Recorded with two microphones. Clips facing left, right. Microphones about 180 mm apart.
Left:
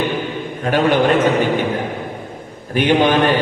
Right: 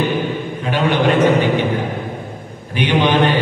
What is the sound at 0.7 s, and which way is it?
Speech, 45° left (ahead or behind).